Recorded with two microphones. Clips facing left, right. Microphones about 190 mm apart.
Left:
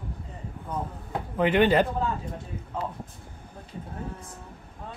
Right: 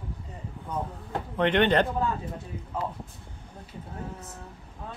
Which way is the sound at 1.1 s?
5° left (ahead or behind).